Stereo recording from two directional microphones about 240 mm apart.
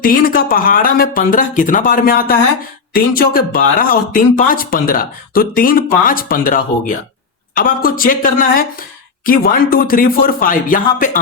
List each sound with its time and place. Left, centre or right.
0.0 s speech: left